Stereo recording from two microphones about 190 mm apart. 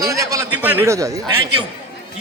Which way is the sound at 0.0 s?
20° right (ahead or behind).